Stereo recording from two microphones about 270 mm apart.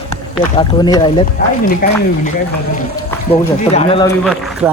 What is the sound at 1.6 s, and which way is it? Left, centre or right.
Speech, left.